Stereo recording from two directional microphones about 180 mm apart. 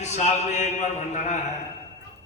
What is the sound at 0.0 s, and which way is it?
A man's voice, 40° left (ahead or behind).